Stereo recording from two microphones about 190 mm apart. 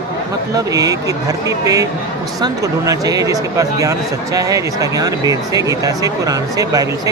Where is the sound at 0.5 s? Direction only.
20° right (ahead or behind).